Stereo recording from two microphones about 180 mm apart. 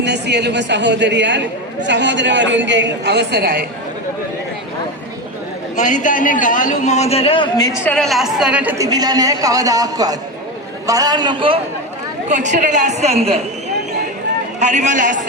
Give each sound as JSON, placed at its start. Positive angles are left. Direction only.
{"t": 0.0, "sound": "a woman's voice", "side_deg": -70}
{"t": 5.7, "sound": "a man's voice", "side_deg": 45}
{"t": 7.9, "sound": "a woman's voice", "side_deg": 5}
{"t": 8.8, "sound": "a man's voice", "side_deg": -20}
{"t": 12.3, "sound": "a woman's voice", "side_deg": -45}
{"t": 14.6, "sound": "a man's voice", "side_deg": -40}